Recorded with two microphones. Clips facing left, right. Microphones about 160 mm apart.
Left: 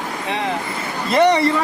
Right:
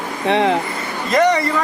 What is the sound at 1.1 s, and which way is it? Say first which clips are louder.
Speech: even; 30° left (ahead or behind).